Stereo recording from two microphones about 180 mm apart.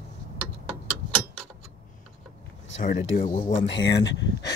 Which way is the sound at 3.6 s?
75° left (ahead or behind).